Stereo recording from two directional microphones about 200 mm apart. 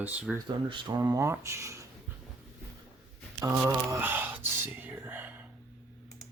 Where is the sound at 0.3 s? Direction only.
25° right (ahead or behind).